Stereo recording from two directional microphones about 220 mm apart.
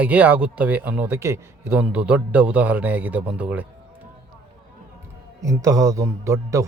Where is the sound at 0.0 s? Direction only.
5° right (ahead or behind).